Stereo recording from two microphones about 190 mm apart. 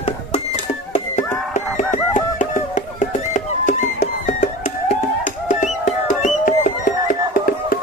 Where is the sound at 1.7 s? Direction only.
40° left (ahead or behind).